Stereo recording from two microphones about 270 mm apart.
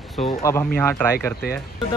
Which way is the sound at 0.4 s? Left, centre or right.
Centre.